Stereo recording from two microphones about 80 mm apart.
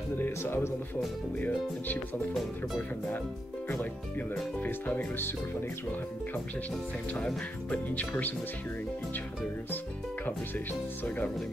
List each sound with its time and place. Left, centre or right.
0.2 s speech: left
4.6 s speech: left
7.7 s speech: centre
10.2 s speech: left